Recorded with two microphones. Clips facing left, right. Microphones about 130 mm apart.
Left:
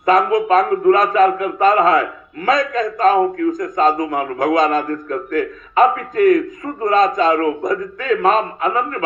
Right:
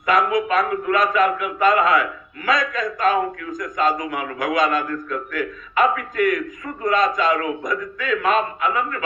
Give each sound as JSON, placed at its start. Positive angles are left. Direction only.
{"t": 0.0, "sound": "a man's voice", "side_deg": 40}